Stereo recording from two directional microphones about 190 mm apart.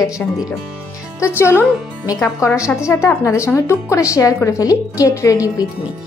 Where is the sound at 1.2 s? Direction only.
15° left (ahead or behind).